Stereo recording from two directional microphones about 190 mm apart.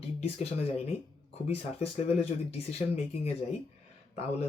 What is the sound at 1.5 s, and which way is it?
Speech, 30° left (ahead or behind).